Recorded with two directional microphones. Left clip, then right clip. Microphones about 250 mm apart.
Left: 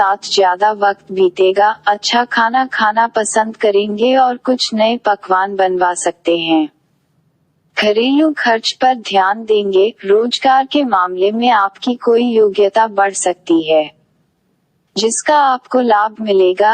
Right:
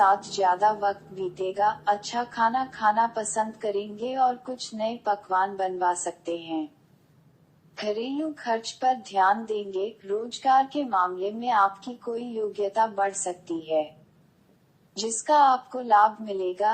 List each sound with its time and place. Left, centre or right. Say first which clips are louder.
0.0 s a woman's voice: left 9 dB; left
7.7 s a woman's voice: left 17 dB; left
14.9 s a woman's voice: left 9 dB; left